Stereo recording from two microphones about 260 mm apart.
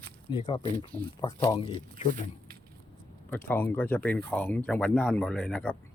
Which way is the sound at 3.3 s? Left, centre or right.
Centre.